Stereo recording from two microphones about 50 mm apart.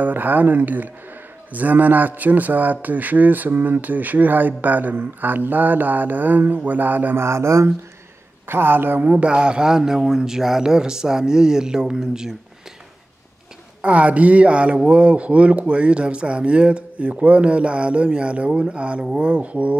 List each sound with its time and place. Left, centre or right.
0.0 s a man's voice: right
7.2 s speech: right
8.5 s speech: right
9.0 s speech: right
13.7 s speech: right